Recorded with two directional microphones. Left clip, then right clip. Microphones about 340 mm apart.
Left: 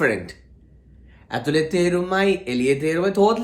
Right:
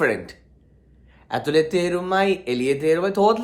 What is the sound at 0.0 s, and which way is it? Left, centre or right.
Speech, centre.